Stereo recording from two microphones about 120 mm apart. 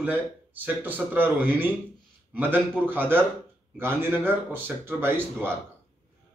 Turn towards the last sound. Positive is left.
turn(degrees=-15)  # may be behind; listen again after turning